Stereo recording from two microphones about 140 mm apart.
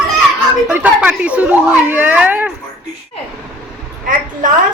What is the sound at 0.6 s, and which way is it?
Speech, 10° right (ahead or behind).